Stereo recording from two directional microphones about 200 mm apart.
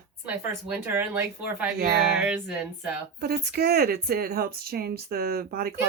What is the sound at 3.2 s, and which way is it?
Speech, 50° right (ahead or behind).